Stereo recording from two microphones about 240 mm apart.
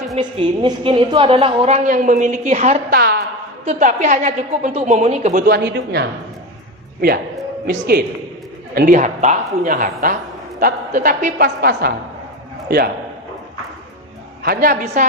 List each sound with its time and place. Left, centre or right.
0.2 s a woman's voice: right
2.9 s a man's voice: right
3.7 s a woman's voice: right
7.7 s a man's voice: right
14.4 s a man's voice: right